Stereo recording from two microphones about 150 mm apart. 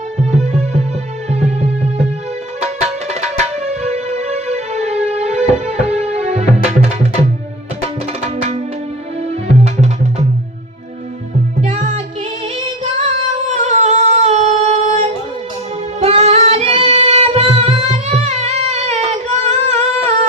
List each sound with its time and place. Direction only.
0.3 s music: 45° right (ahead or behind)
8.2 s music: 45° right (ahead or behind)
11.6 s music: 45° right (ahead or behind)
13.5 s singing: 50° right (ahead or behind)
16.0 s music: 45° right (ahead or behind)